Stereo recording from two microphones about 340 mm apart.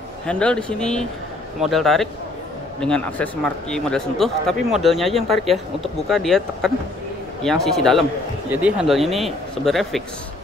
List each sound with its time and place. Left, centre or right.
0.3 s speech: centre